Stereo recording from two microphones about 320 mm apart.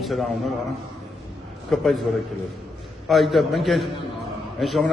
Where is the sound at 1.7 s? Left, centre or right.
Centre.